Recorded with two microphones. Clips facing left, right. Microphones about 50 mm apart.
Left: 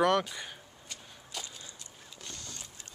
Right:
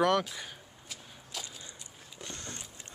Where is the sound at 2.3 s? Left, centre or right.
Right.